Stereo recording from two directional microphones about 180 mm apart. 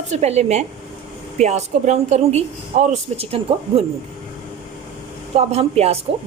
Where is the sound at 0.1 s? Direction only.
40° right (ahead or behind).